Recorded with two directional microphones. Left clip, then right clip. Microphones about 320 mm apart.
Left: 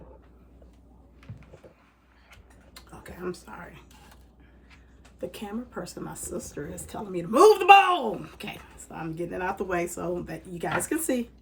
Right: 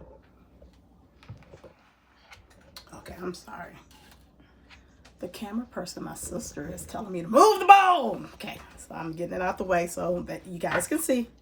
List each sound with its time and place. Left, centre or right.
3.0 s speech: centre
5.3 s speech: centre